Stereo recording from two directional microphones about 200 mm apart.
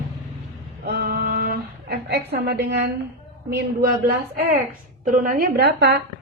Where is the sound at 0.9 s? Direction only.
55° right (ahead or behind).